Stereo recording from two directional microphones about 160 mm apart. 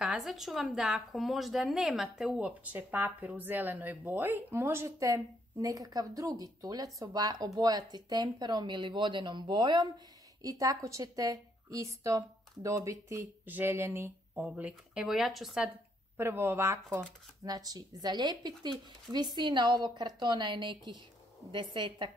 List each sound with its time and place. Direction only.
0.0 s a woman's voice: 5° right (ahead or behind)
16.2 s a woman's voice: 15° right (ahead or behind)